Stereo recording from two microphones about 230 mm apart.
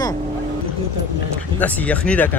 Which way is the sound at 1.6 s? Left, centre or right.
Centre.